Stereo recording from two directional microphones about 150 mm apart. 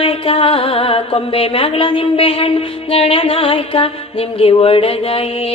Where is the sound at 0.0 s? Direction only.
40° left (ahead or behind).